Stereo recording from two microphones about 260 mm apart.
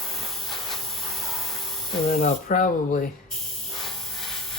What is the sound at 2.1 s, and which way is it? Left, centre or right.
Speech, left.